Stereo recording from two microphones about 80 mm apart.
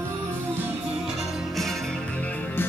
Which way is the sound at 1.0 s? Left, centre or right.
Centre.